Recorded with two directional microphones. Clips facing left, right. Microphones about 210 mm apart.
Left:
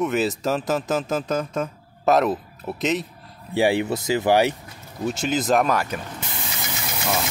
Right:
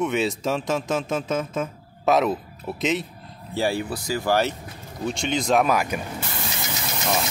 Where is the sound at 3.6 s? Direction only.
20° left (ahead or behind).